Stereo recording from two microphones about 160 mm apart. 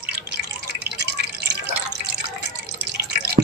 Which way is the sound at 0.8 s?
90° right.